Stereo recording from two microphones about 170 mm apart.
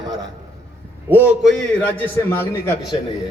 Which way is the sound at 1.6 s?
10° left (ahead or behind).